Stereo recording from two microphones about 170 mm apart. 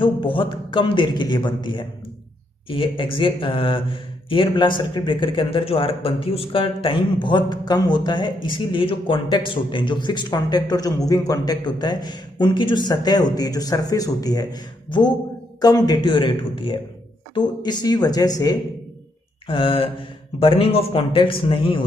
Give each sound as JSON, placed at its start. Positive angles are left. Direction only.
{"t": 0.0, "sound": "a man's voice", "side_deg": 30}